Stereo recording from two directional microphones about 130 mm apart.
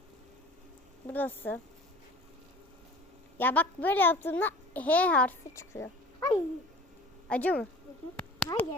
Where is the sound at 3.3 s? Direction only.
15° left (ahead or behind).